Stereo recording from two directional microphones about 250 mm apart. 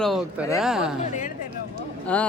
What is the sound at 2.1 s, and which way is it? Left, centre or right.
Speech, centre.